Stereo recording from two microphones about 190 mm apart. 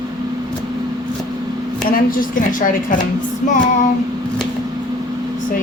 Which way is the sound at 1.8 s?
50° left (ahead or behind).